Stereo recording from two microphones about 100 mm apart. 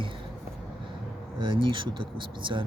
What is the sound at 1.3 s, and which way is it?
Speech, 55° right (ahead or behind).